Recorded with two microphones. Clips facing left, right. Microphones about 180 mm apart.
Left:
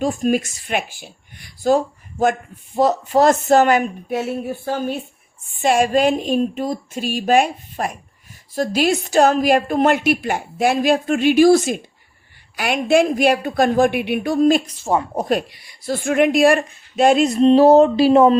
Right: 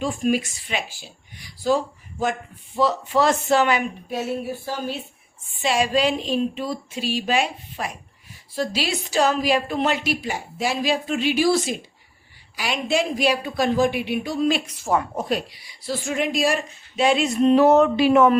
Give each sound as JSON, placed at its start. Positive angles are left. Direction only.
{"t": 0.0, "sound": "a woman's voice", "side_deg": 45}
{"t": 14.7, "sound": "speech", "side_deg": 25}
{"t": 15.2, "sound": "a woman's voice", "side_deg": 50}